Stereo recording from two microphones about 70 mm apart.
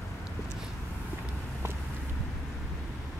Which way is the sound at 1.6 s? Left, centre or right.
Right.